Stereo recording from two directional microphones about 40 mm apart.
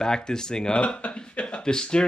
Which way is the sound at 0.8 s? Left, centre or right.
Left.